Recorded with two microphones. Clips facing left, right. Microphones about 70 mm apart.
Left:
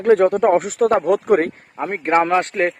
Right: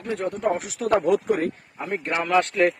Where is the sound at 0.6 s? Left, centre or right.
Left.